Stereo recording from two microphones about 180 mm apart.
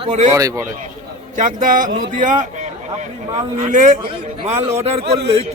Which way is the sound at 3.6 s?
45° right (ahead or behind).